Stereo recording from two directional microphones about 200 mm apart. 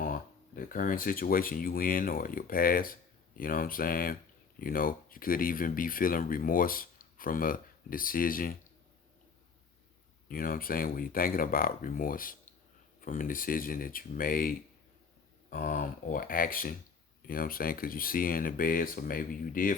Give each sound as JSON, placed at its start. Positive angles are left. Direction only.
{"t": 0.0, "sound": "speech", "side_deg": 45}
{"t": 10.2, "sound": "speech", "side_deg": 45}